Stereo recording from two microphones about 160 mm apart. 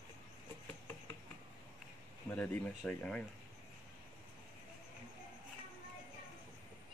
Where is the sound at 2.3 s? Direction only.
10° left (ahead or behind).